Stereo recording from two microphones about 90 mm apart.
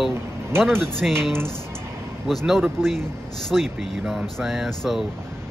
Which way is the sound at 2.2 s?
5° right (ahead or behind).